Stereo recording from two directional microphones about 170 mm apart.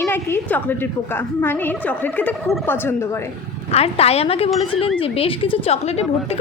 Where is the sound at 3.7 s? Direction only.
35° left (ahead or behind).